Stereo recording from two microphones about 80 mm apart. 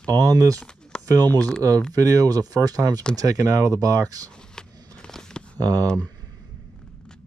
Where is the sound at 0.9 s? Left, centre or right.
Centre.